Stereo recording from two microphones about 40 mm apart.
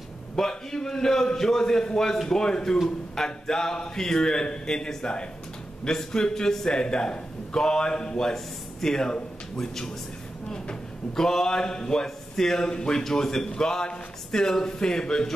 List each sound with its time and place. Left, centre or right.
0.4 s a man's voice: centre
6.7 s a man's voice: left